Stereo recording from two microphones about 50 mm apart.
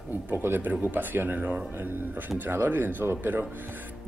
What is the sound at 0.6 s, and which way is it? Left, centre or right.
Speech, right.